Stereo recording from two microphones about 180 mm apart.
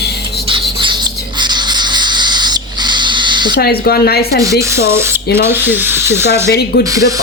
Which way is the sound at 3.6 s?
60° left (ahead or behind).